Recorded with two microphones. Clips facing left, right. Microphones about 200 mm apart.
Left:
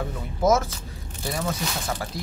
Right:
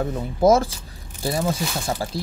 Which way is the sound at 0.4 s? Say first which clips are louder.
Right 4 dB; 30° right (ahead or behind).